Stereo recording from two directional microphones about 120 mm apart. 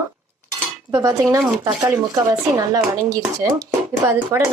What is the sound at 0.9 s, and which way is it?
Speech, 30° right (ahead or behind).